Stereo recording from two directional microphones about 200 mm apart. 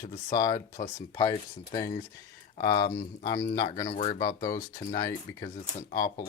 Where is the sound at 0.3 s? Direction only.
20° left (ahead or behind).